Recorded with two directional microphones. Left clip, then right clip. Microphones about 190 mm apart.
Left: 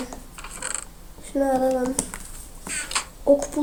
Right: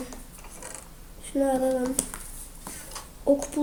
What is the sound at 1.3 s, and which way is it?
Speech, centre (ahead or behind).